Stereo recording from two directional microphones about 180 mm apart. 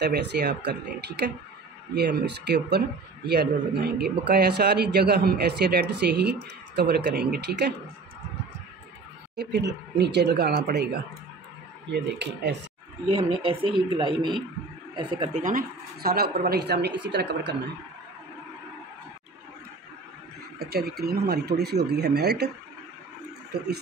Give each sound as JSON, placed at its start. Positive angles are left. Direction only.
{"t": 0.0, "sound": "speech", "side_deg": -65}
{"t": 9.4, "sound": "speech", "side_deg": -70}
{"t": 13.2, "sound": "speech", "side_deg": -30}
{"t": 15.3, "sound": "speech", "side_deg": -50}
{"t": 20.5, "sound": "speech", "side_deg": -60}